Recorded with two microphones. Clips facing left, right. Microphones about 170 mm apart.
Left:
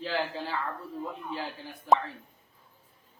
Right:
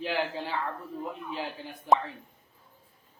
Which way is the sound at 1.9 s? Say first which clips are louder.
Even; 15° right (ahead or behind).